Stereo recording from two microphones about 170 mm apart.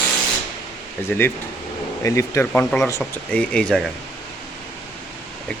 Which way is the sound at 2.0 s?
15° left (ahead or behind).